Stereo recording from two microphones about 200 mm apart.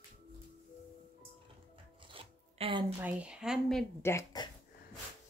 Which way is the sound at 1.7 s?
25° right (ahead or behind).